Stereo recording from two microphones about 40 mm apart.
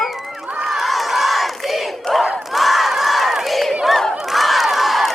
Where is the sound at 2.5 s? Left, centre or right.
Centre.